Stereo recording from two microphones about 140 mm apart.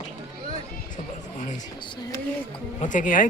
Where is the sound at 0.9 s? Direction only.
60° left (ahead or behind).